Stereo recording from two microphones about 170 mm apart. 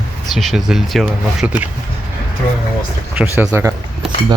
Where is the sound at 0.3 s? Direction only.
Centre (ahead or behind).